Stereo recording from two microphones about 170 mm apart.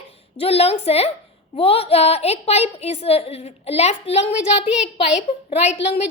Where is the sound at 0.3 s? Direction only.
35° left (ahead or behind).